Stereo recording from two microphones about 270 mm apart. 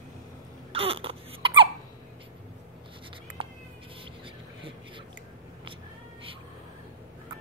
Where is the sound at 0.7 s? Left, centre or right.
Right.